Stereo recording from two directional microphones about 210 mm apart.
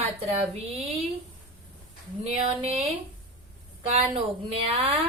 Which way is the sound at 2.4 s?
30° right (ahead or behind).